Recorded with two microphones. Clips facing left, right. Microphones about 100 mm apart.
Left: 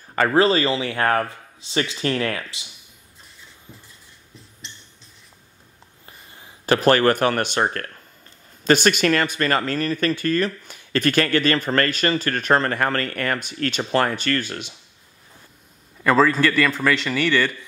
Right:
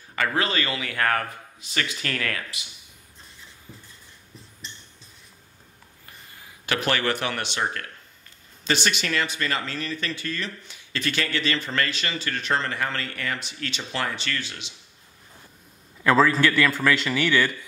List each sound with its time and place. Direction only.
0.1 s a man's voice: 35° left (ahead or behind)
6.0 s speech: 25° left (ahead or behind); by 14.7 s 50° left (ahead or behind)
16.0 s a man's voice: centre (ahead or behind)